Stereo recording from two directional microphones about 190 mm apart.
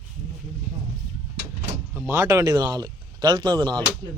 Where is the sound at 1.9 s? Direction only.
15° right (ahead or behind).